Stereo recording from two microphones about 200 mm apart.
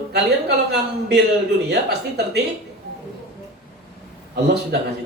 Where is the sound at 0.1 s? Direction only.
55° right (ahead or behind).